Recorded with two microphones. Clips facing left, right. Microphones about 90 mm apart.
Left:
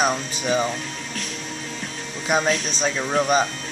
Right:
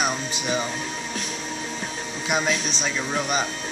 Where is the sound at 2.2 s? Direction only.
35° left (ahead or behind).